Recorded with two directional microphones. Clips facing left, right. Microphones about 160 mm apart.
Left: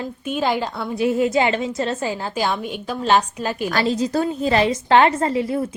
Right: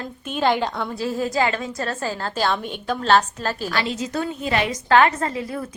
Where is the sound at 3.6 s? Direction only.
40° left (ahead or behind).